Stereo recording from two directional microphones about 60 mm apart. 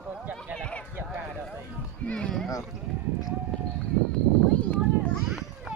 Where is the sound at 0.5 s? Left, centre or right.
Centre.